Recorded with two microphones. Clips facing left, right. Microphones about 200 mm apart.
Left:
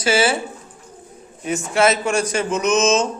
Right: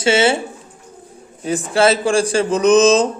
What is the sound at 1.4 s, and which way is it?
Speech, 30° right (ahead or behind).